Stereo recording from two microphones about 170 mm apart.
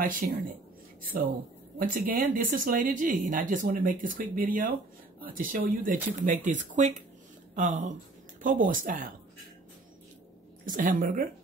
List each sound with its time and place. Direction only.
0.2 s speech: 55° right (ahead or behind)
1.8 s speech: 55° right (ahead or behind)
10.6 s speech: 50° right (ahead or behind)